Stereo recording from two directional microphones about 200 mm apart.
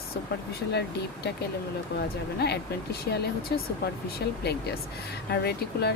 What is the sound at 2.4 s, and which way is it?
Speech, 55° left (ahead or behind).